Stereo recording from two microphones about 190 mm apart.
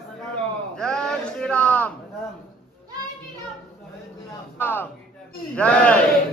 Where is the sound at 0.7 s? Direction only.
5° left (ahead or behind).